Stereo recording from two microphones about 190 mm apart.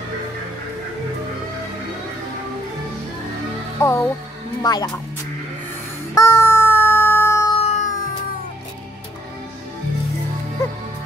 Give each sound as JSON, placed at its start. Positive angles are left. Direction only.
{"t": 3.8, "sound": "speech", "side_deg": 15}
{"t": 6.1, "sound": "a sound", "side_deg": 15}
{"t": 7.5, "sound": "music", "side_deg": 35}